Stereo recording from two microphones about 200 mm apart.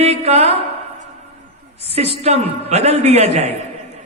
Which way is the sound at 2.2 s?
30° right (ahead or behind).